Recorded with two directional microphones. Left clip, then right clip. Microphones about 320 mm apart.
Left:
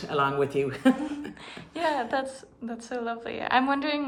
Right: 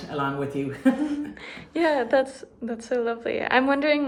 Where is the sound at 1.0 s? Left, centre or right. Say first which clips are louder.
Right 5 dB; centre.